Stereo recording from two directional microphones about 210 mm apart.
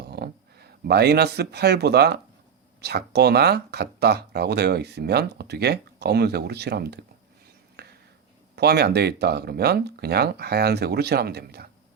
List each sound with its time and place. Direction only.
0.0 s speech: 50° right (ahead or behind)
7.8 s a sound: 50° right (ahead or behind)
8.5 s speech: 50° right (ahead or behind)